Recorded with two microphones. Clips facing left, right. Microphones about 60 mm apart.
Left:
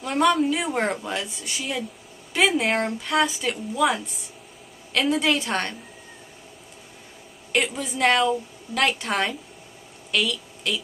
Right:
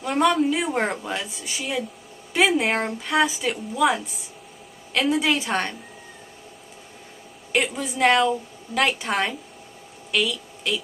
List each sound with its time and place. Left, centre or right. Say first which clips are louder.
0.0 s speech: even; centre
7.5 s a woman's voice: right 1 dB; centre